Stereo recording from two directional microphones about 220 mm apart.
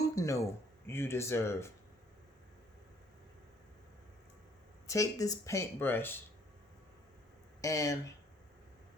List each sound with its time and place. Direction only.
0.0 s a sound: 15° left (ahead or behind)
0.9 s speech: 10° left (ahead or behind)
4.9 s speech: 15° left (ahead or behind)
7.6 s speech: 15° left (ahead or behind)